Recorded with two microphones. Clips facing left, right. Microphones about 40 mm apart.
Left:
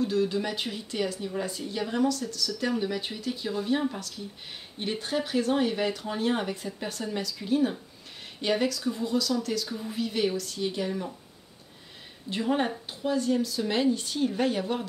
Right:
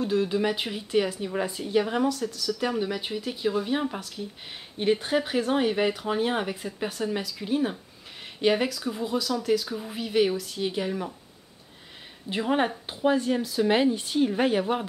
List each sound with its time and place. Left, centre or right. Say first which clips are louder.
0.0 s speech: right 2 dB; centre
12.3 s speech: right 2 dB; right